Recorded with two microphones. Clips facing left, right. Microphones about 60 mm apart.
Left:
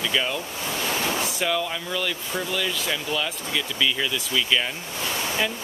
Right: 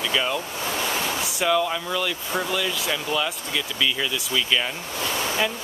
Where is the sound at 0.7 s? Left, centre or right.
Centre.